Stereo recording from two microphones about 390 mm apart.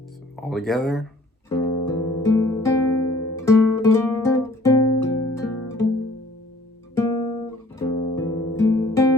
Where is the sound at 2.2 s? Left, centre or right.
Centre.